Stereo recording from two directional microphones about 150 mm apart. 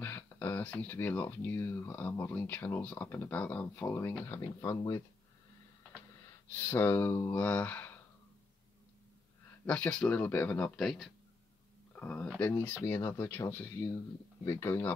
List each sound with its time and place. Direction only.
0.0 s speech: 10° left (ahead or behind)
6.5 s speech: 15° left (ahead or behind)
9.7 s speech: 5° left (ahead or behind)